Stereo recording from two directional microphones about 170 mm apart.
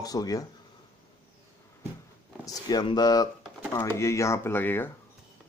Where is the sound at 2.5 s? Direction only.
25° left (ahead or behind).